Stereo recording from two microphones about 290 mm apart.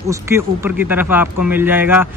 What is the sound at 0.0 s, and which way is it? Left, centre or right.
Speech, centre.